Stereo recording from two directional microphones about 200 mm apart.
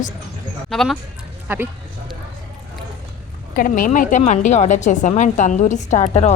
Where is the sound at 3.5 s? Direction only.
45° left (ahead or behind).